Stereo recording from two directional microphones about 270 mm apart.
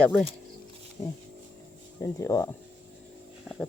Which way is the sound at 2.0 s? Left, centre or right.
Centre.